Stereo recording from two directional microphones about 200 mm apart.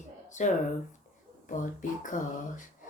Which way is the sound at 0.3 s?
40° left (ahead or behind).